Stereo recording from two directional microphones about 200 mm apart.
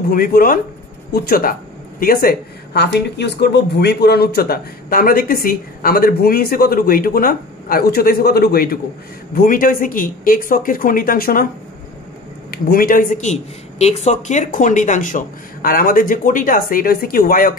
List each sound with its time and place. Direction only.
0.1 s speech: 45° left (ahead or behind)
12.4 s speech: 45° left (ahead or behind)